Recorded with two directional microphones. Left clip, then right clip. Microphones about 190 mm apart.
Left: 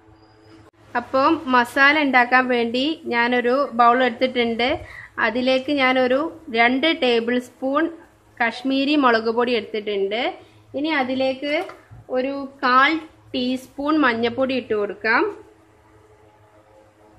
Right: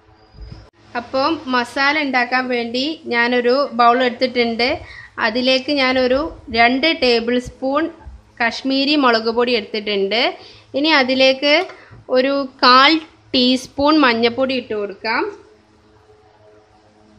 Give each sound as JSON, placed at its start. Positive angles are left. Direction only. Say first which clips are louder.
{"t": 0.9, "sound": "a woman's voice", "louder": "even", "side_deg": 0}
{"t": 12.1, "sound": "a woman's voice", "louder": "right 8 dB", "side_deg": -45}
{"t": 14.3, "sound": "a woman's voice", "louder": "right 3 dB", "side_deg": -15}
{"t": 14.7, "sound": "speech", "louder": "left 1 dB", "side_deg": 0}